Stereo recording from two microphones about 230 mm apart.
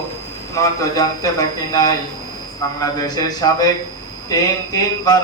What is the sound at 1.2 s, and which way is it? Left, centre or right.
Speech, centre.